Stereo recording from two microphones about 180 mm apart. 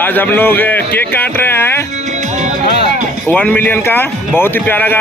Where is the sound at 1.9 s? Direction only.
40° right (ahead or behind).